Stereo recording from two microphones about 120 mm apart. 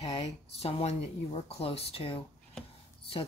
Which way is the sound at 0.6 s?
55° left (ahead or behind).